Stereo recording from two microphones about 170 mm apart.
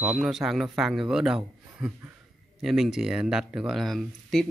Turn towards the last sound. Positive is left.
turn(degrees=0)  # may be behind; listen again after turning